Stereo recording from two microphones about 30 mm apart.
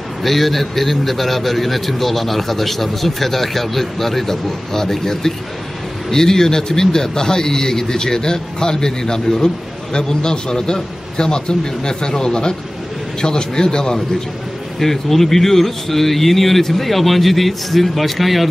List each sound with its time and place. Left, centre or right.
0.2 s a man's voice: centre; by 14.0 s left
14.8 s a man's voice: centre